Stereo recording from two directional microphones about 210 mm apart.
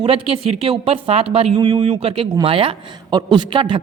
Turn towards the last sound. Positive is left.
turn(degrees=-25)  # may be behind; listen again after turning